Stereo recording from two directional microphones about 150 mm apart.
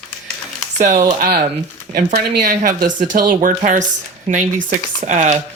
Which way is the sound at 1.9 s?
65° right (ahead or behind).